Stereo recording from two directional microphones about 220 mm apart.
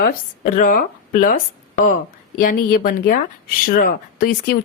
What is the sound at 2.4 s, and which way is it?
Speech, 40° left (ahead or behind).